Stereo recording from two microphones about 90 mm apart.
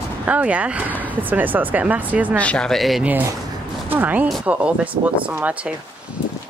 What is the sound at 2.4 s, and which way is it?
Speech, 10° left (ahead or behind).